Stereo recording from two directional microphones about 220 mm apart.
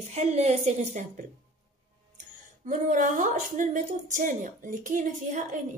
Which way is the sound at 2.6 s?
35° right (ahead or behind).